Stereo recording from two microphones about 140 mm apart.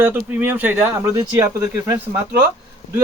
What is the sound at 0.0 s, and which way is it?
Speech, 15° right (ahead or behind).